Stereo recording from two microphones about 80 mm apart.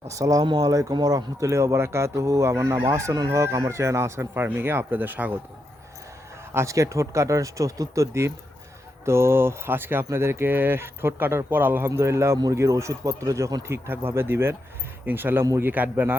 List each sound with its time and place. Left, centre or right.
0.1 s speech: right
6.5 s speech: right